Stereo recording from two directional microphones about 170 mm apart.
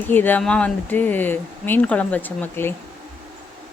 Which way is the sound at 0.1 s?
10° left (ahead or behind).